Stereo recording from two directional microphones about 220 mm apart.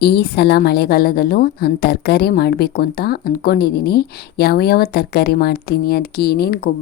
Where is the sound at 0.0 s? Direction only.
45° left (ahead or behind).